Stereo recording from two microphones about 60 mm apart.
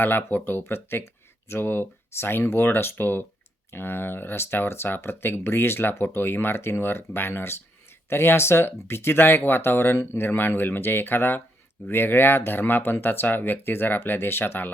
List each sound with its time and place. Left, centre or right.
0.0 s speech: left